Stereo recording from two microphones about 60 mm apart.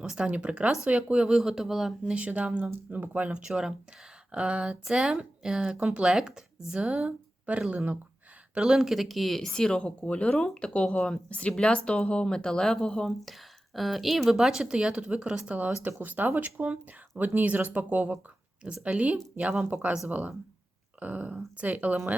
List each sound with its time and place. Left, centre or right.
0.0 s speech: centre
2.0 s speech: right
8.5 s speech: centre; by 22.1 s right